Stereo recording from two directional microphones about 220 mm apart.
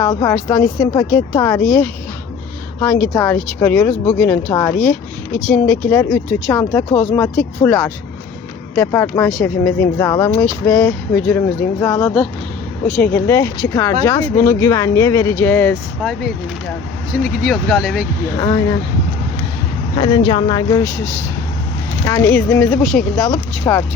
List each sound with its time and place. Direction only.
0.0 s speech: 15° left (ahead or behind); by 18.1 s centre (ahead or behind)
18.3 s speech: 15° left (ahead or behind)
20.0 s speech: 20° left (ahead or behind)
22.0 s speech: 15° left (ahead or behind)